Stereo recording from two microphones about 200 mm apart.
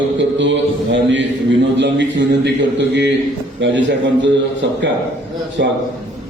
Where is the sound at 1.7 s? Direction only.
60° right (ahead or behind).